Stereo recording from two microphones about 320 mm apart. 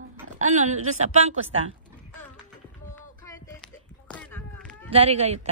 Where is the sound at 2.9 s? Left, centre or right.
Centre.